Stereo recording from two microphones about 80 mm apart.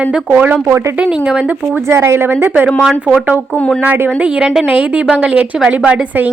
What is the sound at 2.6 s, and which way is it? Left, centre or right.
Speech, centre.